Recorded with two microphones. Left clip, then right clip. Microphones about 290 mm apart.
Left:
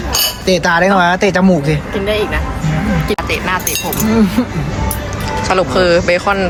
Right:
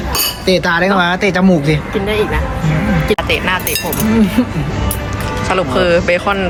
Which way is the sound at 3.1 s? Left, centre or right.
Centre.